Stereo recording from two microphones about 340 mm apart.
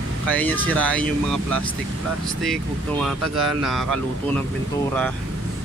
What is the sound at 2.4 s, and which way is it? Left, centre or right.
Speech, centre.